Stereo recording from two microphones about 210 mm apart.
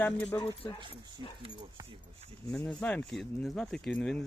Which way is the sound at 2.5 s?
5° left (ahead or behind).